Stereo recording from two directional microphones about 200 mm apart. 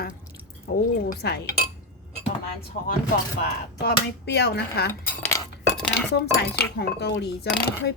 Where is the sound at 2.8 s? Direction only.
45° left (ahead or behind).